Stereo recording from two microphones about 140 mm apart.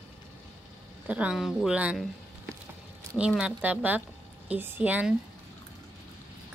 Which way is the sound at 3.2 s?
5° right (ahead or behind).